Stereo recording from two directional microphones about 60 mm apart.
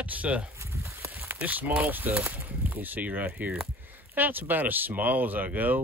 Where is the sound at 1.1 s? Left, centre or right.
Right.